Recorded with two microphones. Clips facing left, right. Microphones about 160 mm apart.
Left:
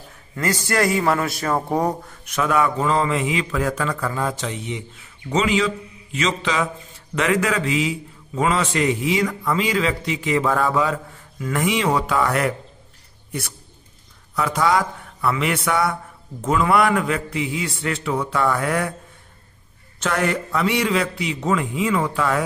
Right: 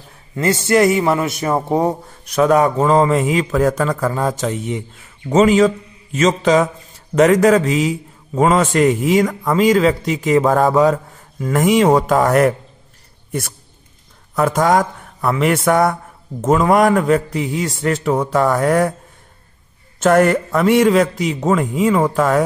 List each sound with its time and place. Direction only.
0.4 s a man's voice: 25° right (ahead or behind)
2.2 s a man's voice: 40° right (ahead or behind)
14.3 s a man's voice: 45° right (ahead or behind)
20.0 s a man's voice: 45° right (ahead or behind)